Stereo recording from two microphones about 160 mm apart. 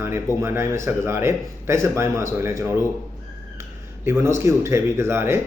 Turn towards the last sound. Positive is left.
turn(degrees=-15)  # may be behind; listen again after turning